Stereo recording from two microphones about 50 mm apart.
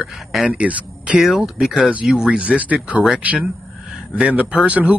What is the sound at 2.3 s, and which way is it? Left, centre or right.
Speech, right.